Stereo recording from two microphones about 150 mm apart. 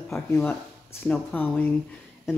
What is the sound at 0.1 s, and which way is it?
Speech, 15° left (ahead or behind).